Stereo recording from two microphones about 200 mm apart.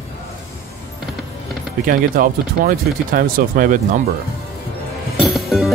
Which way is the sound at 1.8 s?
45° right (ahead or behind).